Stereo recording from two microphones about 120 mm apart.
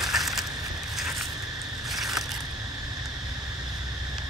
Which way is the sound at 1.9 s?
Centre (ahead or behind).